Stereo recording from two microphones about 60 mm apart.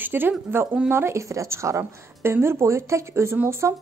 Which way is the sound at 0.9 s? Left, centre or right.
Right.